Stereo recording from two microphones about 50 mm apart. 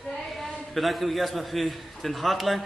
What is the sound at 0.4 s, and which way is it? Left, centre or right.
A man's voice, centre.